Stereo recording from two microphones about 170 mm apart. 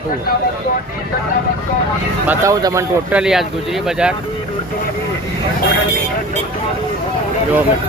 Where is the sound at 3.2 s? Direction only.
Centre (ahead or behind).